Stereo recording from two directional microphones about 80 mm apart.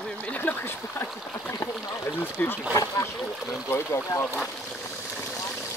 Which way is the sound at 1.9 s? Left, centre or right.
Left.